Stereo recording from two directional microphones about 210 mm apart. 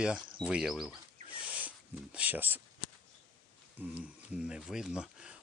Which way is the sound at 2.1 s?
10° right (ahead or behind).